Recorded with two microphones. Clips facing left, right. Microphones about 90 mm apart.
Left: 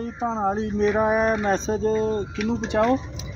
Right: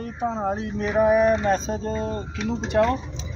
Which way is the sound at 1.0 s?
35° left (ahead or behind).